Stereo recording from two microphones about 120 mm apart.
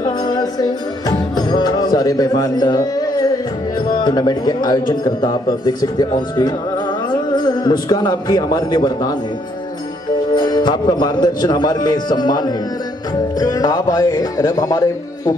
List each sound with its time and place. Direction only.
0.0 s music: 35° left (ahead or behind)
3.8 s a man's voice: 35° left (ahead or behind)
10.3 s a man's voice: 35° left (ahead or behind)